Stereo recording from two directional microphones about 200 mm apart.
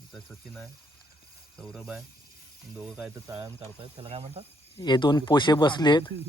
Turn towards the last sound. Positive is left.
turn(degrees=20)  # may be behind; listen again after turning